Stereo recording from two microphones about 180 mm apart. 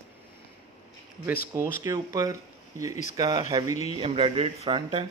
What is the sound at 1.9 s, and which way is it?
Speech, 20° right (ahead or behind).